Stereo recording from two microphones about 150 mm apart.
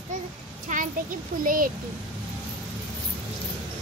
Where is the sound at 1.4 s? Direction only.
70° right (ahead or behind).